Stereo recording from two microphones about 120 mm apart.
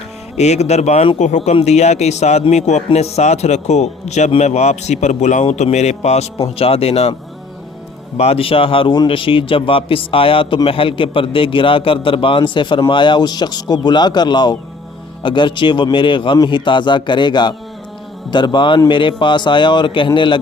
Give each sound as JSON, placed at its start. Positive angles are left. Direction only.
{"t": 0.3, "sound": "a man's voice", "side_deg": 70}
{"t": 8.2, "sound": "a man's voice", "side_deg": 55}